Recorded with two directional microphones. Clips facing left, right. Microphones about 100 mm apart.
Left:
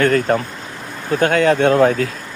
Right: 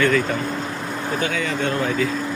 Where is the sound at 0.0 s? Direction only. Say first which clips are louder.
Left 4 dB; 50° left (ahead or behind).